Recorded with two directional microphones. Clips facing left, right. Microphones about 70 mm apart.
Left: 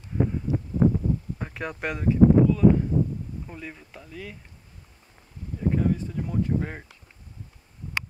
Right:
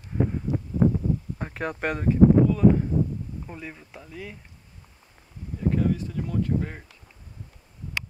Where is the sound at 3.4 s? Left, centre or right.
Centre.